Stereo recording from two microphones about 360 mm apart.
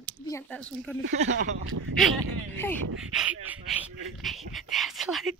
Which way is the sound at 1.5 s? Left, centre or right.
Right.